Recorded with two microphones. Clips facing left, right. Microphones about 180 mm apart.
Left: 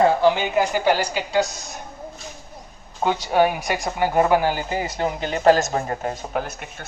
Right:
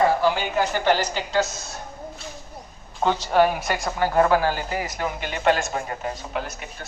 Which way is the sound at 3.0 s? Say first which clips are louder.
Even; 10° left (ahead or behind).